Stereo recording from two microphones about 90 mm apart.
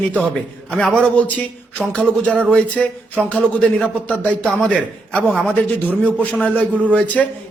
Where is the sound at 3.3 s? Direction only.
15° left (ahead or behind).